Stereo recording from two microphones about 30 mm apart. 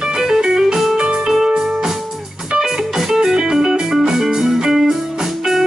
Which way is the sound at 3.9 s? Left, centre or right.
Centre.